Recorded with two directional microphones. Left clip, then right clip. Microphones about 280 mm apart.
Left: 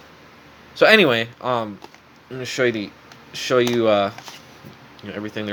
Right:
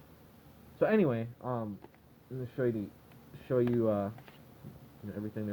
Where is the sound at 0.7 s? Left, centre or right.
Left.